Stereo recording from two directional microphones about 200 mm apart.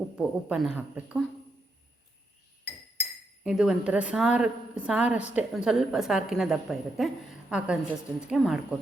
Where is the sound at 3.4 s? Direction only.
5° right (ahead or behind).